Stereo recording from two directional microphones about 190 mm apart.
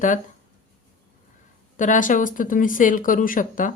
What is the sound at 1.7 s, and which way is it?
A woman's voice, 40° left (ahead or behind).